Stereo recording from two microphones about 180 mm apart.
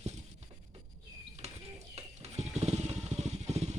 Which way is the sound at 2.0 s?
35° right (ahead or behind).